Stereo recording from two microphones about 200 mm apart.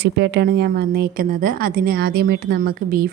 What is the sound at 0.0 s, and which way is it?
Speech, 55° right (ahead or behind).